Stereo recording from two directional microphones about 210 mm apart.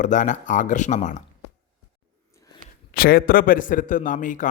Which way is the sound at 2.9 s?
45° left (ahead or behind).